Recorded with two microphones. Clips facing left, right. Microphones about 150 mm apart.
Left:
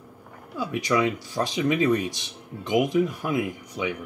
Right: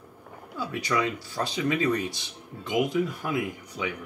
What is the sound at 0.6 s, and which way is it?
Speech, 15° left (ahead or behind).